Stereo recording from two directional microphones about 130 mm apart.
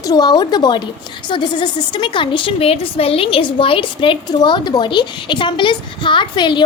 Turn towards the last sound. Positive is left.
turn(degrees=35)  # may be behind; listen again after turning